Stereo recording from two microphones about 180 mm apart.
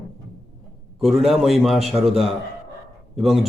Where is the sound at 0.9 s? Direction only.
Centre (ahead or behind).